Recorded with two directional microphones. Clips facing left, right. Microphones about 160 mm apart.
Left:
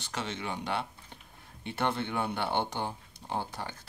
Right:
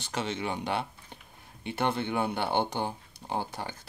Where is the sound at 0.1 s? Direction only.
20° right (ahead or behind).